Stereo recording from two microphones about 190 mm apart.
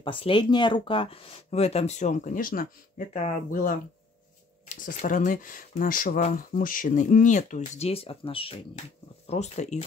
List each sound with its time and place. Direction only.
0.0 s speech: 25° left (ahead or behind)